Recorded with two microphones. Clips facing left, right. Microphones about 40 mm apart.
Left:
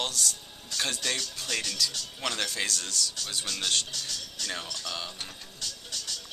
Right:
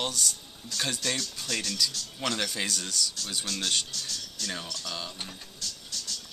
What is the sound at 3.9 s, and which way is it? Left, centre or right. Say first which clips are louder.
Speech: left 1 dB; left.